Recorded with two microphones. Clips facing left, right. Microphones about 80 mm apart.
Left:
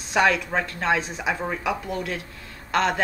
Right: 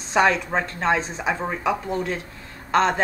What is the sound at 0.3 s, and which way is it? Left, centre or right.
Speech, right.